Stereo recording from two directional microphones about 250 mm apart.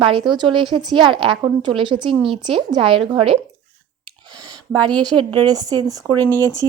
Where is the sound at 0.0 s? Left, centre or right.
Centre.